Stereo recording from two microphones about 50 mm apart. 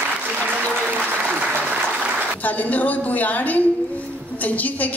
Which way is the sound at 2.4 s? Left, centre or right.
Left.